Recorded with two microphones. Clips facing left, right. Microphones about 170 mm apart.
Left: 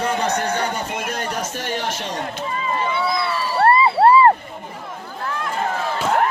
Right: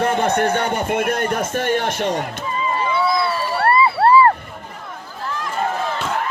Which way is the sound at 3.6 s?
25° left (ahead or behind).